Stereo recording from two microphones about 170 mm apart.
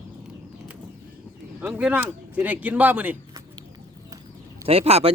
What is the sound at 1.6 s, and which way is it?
Speech, 10° right (ahead or behind).